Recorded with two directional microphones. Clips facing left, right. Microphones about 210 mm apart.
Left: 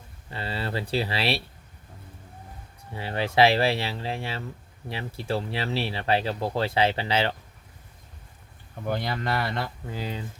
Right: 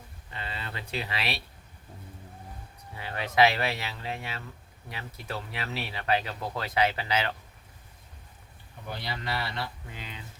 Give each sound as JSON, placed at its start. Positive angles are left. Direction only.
{"t": 0.3, "sound": "speech", "side_deg": 35}
{"t": 2.9, "sound": "speech", "side_deg": 30}
{"t": 8.9, "sound": "speech", "side_deg": 50}
{"t": 9.9, "sound": "speech", "side_deg": 35}